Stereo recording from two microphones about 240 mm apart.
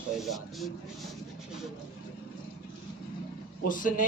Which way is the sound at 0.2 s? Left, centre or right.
Centre.